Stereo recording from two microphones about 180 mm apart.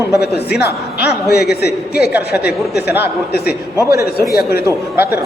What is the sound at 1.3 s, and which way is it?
A man's voice, 65° left (ahead or behind).